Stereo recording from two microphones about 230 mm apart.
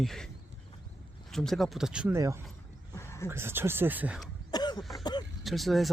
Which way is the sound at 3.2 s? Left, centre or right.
Centre.